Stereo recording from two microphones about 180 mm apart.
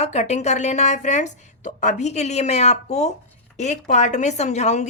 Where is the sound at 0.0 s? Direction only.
40° left (ahead or behind).